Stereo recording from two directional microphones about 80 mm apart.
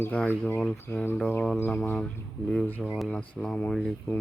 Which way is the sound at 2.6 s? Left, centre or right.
Centre.